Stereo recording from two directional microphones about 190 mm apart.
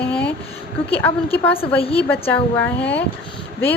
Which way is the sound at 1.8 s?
30° left (ahead or behind).